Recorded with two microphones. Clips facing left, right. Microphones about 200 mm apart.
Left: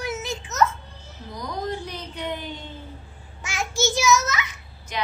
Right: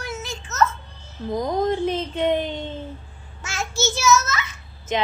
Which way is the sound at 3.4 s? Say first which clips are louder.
Even; 15° left (ahead or behind).